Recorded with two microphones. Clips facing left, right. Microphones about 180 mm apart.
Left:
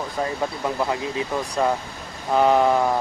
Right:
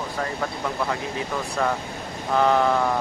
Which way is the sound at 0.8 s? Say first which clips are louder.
Left 2 dB; 20° left (ahead or behind).